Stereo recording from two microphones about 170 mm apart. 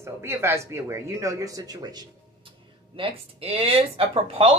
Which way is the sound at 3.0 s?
35° right (ahead or behind).